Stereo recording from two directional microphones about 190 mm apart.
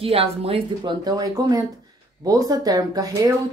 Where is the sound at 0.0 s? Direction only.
30° right (ahead or behind).